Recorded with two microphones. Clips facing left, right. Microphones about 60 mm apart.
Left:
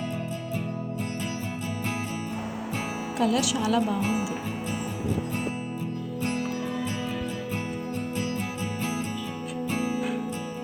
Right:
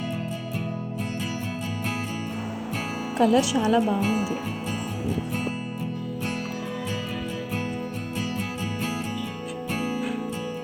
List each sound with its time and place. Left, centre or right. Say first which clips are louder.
3.2 s speech: right 5 dB; right